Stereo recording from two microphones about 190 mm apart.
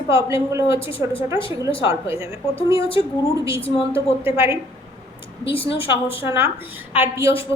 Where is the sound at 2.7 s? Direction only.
30° left (ahead or behind).